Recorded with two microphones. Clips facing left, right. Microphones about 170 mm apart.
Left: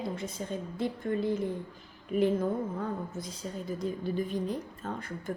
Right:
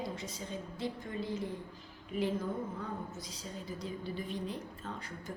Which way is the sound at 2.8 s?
55° left (ahead or behind).